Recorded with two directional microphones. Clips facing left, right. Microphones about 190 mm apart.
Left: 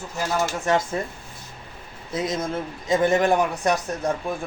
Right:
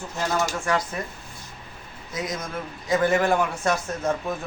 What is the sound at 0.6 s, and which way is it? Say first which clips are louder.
Speech: left 3 dB; 25° left (ahead or behind).